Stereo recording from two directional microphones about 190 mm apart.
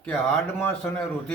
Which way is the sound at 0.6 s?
10° left (ahead or behind).